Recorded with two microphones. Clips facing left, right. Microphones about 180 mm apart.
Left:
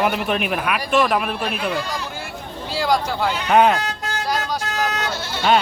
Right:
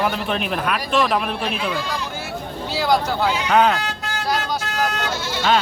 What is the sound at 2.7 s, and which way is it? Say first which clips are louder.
Speech: right 1 dB; 5° right (ahead or behind).